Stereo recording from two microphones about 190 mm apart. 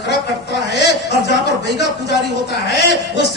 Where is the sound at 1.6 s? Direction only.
60° left (ahead or behind).